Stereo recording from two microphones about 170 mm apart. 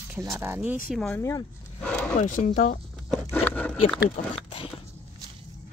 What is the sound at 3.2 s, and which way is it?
Speech, 15° left (ahead or behind).